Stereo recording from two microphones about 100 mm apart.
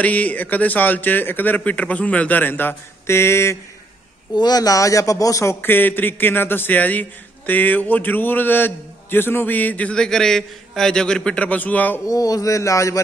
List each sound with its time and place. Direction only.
0.0 s a man's voice: 15° left (ahead or behind)
4.4 s a man's voice: 40° left (ahead or behind); by 12.0 s 15° left (ahead or behind)
12.1 s speech: 35° left (ahead or behind)